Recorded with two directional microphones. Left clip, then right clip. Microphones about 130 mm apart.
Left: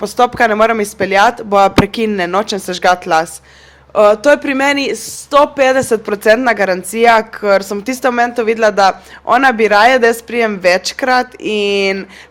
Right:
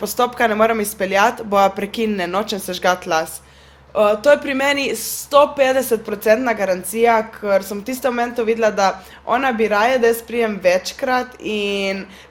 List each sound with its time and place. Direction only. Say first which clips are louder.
0.0 s a woman's voice: left 6 dB; 35° left (ahead or behind)